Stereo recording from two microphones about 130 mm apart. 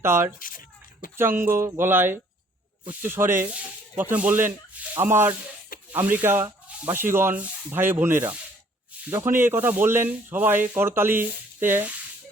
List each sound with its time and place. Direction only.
0.0 s speech: 20° right (ahead or behind)
0.3 s speech: 90° left
1.1 s speech: 20° right (ahead or behind)